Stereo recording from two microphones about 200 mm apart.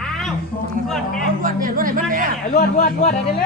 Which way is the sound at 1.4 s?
45° right (ahead or behind).